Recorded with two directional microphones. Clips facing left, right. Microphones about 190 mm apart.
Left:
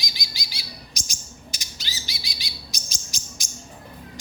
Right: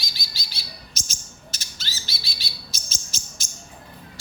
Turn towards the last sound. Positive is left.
turn(degrees=15)  # may be behind; listen again after turning